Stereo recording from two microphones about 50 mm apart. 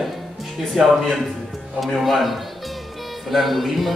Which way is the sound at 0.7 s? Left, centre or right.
Centre.